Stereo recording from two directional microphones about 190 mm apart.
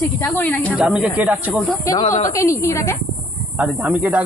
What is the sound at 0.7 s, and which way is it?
Speech, 5° right (ahead or behind).